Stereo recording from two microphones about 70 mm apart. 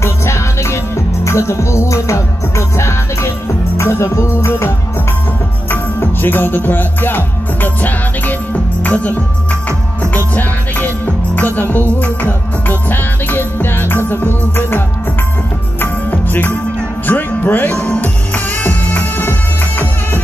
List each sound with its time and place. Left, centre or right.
0.0 s music: left
8.8 s speech: left
9.7 s music: left
15.8 s music: left